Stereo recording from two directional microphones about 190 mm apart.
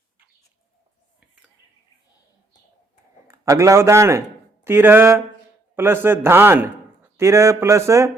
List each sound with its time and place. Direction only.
3.2 s a man's voice: 15° right (ahead or behind)
4.6 s a sound: 10° right (ahead or behind)
5.7 s a man's voice: 10° right (ahead or behind)